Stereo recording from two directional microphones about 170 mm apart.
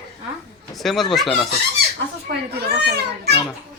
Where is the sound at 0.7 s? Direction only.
Centre (ahead or behind).